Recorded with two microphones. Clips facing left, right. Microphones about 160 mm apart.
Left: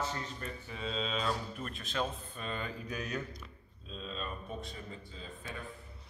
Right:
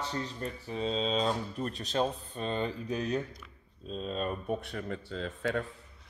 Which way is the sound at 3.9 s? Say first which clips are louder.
Right 8 dB; 45° right (ahead or behind).